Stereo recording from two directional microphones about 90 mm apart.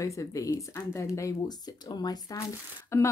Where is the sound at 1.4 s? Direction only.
50° left (ahead or behind).